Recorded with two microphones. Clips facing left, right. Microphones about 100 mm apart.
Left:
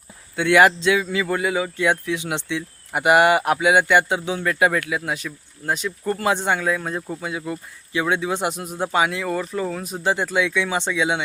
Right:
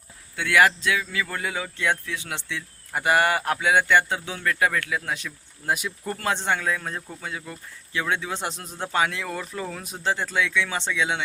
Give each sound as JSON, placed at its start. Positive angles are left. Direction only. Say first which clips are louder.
{"t": 0.3, "sound": "a man's voice", "louder": "left 5 dB", "side_deg": 25}
{"t": 1.4, "sound": "speech", "louder": "left 7 dB", "side_deg": 10}
{"t": 5.1, "sound": "speech", "louder": "left 4 dB", "side_deg": 0}
{"t": 5.7, "sound": "speech", "louder": "left 6 dB", "side_deg": -10}
{"t": 6.1, "sound": "speech", "louder": "left 3 dB", "side_deg": 10}
{"t": 10.0, "sound": "speech", "louder": "left 4 dB", "side_deg": 15}